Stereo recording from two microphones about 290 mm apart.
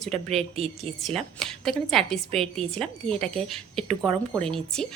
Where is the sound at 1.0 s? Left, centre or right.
Centre.